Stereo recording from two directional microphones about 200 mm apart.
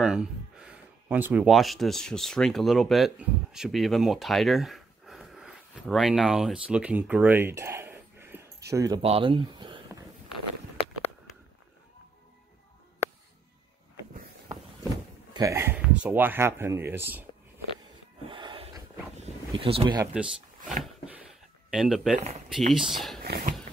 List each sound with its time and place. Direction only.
0.0 s speech: 5° right (ahead or behind)
9.0 s speech: 30° right (ahead or behind)
10.3 s walk: 30° left (ahead or behind)
15.3 s speech: 15° right (ahead or behind)
18.3 s a sound: 25° right (ahead or behind)
20.8 s a sound: 5° right (ahead or behind)
21.6 s speech: centre (ahead or behind)
22.2 s speech: 35° right (ahead or behind)
22.7 s speech: centre (ahead or behind)
23.2 s a sound: 55° right (ahead or behind)